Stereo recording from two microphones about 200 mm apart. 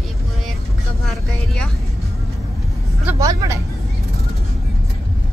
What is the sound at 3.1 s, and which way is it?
Vehicle, 15° right (ahead or behind).